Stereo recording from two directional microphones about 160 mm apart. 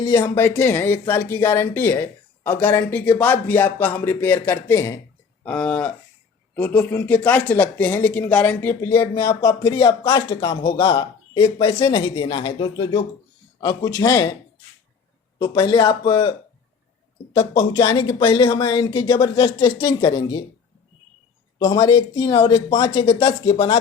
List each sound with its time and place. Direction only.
0.0 s speech: 25° left (ahead or behind)
0.3 s speech: 15° left (ahead or behind)
15.4 s speech: 30° left (ahead or behind)
17.6 s speech: 30° left (ahead or behind)
21.6 s speech: 30° left (ahead or behind)